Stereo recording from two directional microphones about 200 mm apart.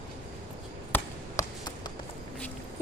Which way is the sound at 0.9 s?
15° left (ahead or behind).